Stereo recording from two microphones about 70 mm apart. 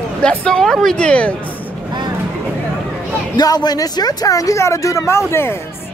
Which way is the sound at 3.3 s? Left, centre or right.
Left.